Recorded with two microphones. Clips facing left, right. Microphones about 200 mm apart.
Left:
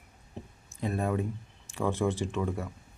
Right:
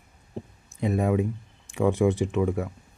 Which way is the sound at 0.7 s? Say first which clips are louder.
Right 6 dB; 15° right (ahead or behind).